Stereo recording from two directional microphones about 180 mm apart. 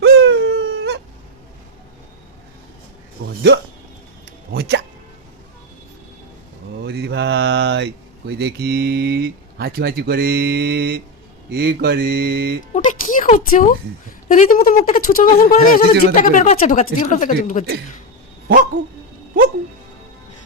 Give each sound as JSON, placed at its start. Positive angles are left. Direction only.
{"t": 0.0, "sound": "dog", "side_deg": -70}
{"t": 3.2, "sound": "a sound", "side_deg": -60}
{"t": 4.5, "sound": "speech", "side_deg": -65}
{"t": 6.8, "sound": "mantra", "side_deg": -65}
{"t": 8.3, "sound": "speech", "side_deg": -65}
{"t": 12.7, "sound": "music", "side_deg": 45}
{"t": 14.3, "sound": "speech", "side_deg": 45}
{"t": 18.4, "sound": "dog", "side_deg": -55}